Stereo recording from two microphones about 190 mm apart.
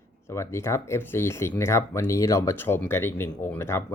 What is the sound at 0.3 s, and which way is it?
Speech, 15° left (ahead or behind).